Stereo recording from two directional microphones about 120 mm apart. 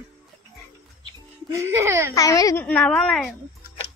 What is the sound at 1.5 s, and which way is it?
Speech, 25° right (ahead or behind).